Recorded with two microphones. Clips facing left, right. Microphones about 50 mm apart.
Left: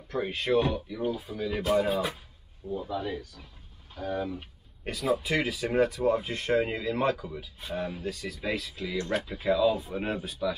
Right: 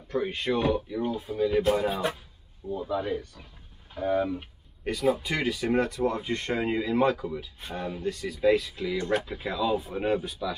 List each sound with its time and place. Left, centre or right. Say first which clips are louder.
0.1 s speech: left 1 dB; centre
2.7 s speech: right 3 dB; centre
4.2 s speech: right 5 dB; centre
4.8 s speech: right 2 dB; centre
6.7 s speech: right 4 dB; centre
7.1 s speech: right 2 dB; centre